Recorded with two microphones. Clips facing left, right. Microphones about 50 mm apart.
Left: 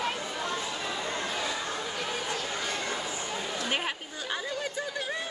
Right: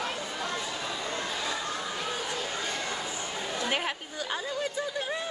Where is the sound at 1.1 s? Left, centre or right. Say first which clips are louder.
Even; centre.